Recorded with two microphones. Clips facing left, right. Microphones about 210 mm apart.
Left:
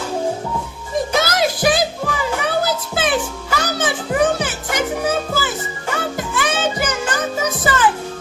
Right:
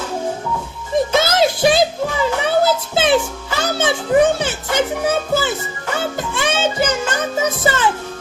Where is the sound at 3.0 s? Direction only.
25° right (ahead or behind).